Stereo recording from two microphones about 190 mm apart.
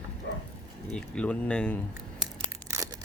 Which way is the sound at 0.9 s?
5° left (ahead or behind).